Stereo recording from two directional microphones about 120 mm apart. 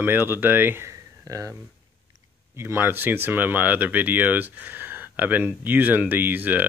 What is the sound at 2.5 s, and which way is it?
Speech, 20° right (ahead or behind).